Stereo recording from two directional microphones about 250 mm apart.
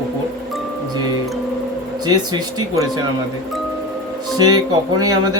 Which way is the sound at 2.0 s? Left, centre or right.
Centre.